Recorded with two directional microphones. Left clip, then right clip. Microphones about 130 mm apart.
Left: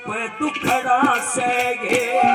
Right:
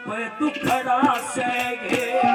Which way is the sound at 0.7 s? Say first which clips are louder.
Left 3 dB; 15° left (ahead or behind).